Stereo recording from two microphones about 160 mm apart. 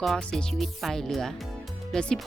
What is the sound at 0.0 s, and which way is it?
Speech, 5° left (ahead or behind).